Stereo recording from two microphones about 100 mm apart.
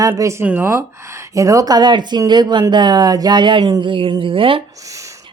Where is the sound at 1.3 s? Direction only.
35° right (ahead or behind).